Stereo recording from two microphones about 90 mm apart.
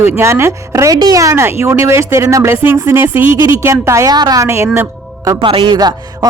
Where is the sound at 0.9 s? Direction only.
45° right (ahead or behind).